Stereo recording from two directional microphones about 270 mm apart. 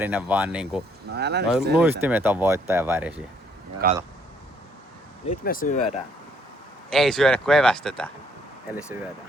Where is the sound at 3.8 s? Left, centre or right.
Right.